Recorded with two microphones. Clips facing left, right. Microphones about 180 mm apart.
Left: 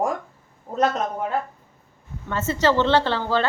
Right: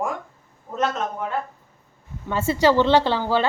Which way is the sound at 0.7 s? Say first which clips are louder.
Left 2 dB; 35° left (ahead or behind).